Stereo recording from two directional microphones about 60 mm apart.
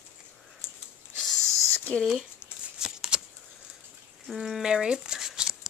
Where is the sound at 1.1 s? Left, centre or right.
Centre.